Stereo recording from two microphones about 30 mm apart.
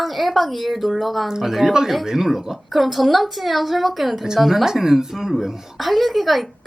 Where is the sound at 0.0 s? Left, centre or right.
Centre.